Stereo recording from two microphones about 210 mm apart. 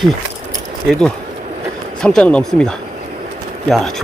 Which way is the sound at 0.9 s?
5° left (ahead or behind).